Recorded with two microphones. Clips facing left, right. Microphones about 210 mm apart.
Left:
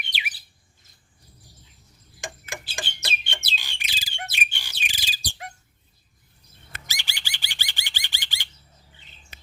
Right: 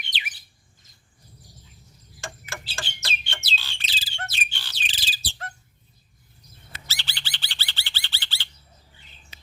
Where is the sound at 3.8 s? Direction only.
15° left (ahead or behind).